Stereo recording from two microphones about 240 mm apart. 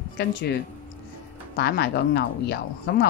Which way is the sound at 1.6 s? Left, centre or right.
Left.